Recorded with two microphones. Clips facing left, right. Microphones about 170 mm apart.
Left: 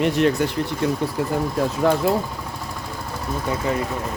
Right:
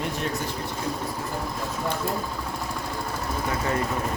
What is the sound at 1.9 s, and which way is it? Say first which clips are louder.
Speech: left 11 dB; 90° left.